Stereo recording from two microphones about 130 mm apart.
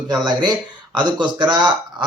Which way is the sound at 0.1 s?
35° right (ahead or behind).